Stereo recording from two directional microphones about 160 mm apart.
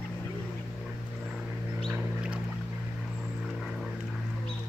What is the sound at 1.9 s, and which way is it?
Boat, 5° right (ahead or behind).